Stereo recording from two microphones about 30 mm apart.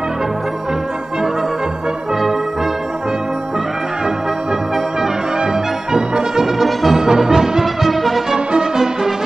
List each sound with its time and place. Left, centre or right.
5.4 s brass instrument: right
6.6 s music: centre
7.0 s music: centre
7.6 s music: centre
8.5 s music: centre